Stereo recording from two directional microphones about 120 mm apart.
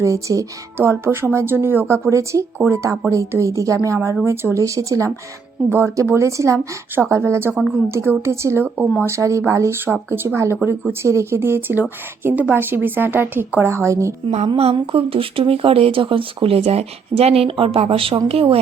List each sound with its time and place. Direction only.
0.0 s speech: 25° right (ahead or behind)
14.3 s music: 60° right (ahead or behind)
14.8 s speech: 50° right (ahead or behind)
18.3 s music: 55° right (ahead or behind)